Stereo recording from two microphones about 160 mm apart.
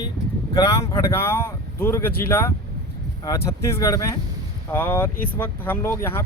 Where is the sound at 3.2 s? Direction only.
20° left (ahead or behind).